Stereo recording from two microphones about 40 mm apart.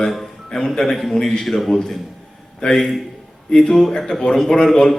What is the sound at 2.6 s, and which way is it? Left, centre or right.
A man's voice, centre.